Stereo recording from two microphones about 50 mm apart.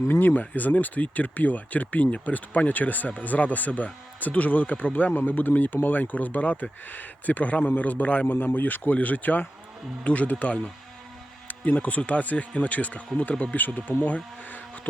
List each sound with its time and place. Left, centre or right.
0.1 s speech: left